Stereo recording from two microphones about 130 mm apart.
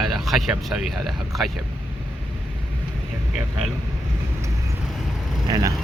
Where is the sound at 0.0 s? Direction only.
Centre (ahead or behind).